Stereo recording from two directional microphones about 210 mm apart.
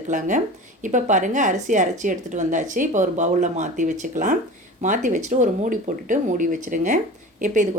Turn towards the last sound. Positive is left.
turn(degrees=-35)  # may be behind; listen again after turning